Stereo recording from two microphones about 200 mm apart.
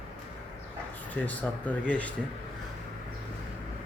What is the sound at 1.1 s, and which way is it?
Speech, 10° left (ahead or behind).